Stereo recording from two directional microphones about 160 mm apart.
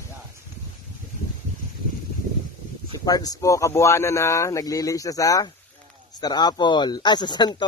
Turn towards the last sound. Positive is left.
turn(degrees=25)  # may be behind; listen again after turning